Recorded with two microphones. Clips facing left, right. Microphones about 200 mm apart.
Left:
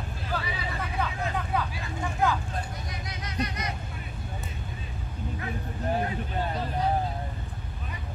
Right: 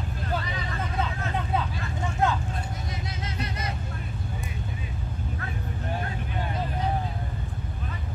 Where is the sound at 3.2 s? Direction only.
25° right (ahead or behind).